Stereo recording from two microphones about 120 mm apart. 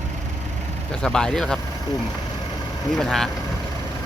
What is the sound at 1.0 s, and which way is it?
Speech, 5° left (ahead or behind).